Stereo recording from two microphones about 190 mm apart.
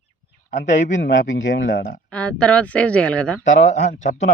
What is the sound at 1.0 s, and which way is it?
Speech, 70° left (ahead or behind).